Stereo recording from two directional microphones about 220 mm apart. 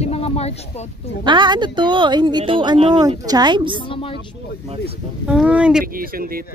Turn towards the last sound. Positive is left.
turn(degrees=-40)  # may be behind; listen again after turning